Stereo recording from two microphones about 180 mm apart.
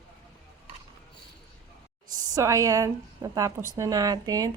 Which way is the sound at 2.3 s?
15° right (ahead or behind).